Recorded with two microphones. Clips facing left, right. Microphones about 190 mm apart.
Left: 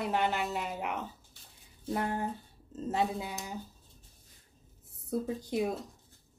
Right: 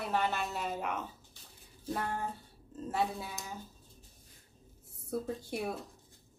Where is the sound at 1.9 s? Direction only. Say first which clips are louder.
Left 3 dB; 15° left (ahead or behind).